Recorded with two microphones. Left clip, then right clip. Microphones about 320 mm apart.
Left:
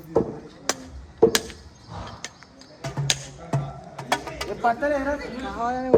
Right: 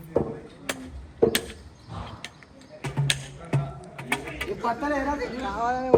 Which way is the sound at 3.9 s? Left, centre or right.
Centre.